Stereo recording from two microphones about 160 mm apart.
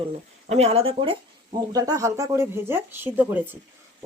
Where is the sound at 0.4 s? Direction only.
40° right (ahead or behind).